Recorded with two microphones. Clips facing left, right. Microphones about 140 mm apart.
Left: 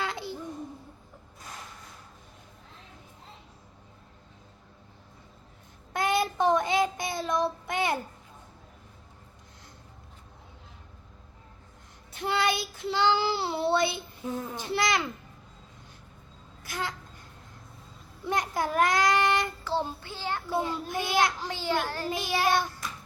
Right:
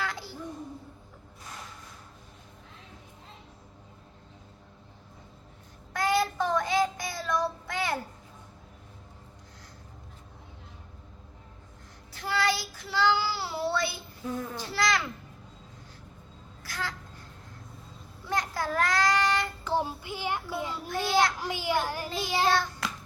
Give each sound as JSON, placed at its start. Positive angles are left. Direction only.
{"t": 0.0, "sound": "a sound", "side_deg": 20}
{"t": 5.9, "sound": "child singing", "side_deg": 20}
{"t": 12.1, "sound": "child singing", "side_deg": 20}
{"t": 16.6, "sound": "speech", "side_deg": 20}
{"t": 18.3, "sound": "child singing", "side_deg": 20}
{"t": 19.6, "sound": "a child's voice", "side_deg": -15}
{"t": 20.8, "sound": "a child's voice", "side_deg": 20}
{"t": 21.3, "sound": "a child's voice", "side_deg": -10}
{"t": 22.2, "sound": "child singing", "side_deg": -20}
{"t": 22.4, "sound": "a child's voice", "side_deg": 20}